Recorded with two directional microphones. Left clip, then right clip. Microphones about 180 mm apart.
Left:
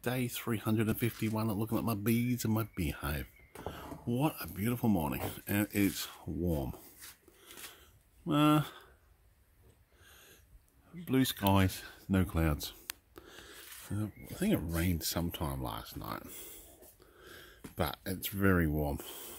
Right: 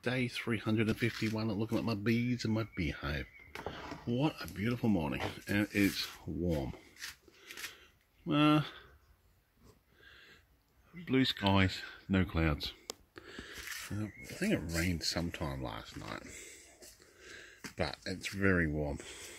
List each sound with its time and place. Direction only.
0.0 s speech: 5° left (ahead or behind)
8.3 s speech: 5° left (ahead or behind)
11.1 s speech: 10° left (ahead or behind)
13.1 s a sound: 5° left (ahead or behind)
14.7 s speech: 15° left (ahead or behind)
17.3 s a sound: 20° left (ahead or behind)
17.7 s speech: 20° left (ahead or behind)